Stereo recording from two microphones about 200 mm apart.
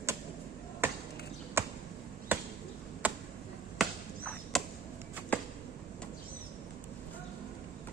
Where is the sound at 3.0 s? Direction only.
10° right (ahead or behind).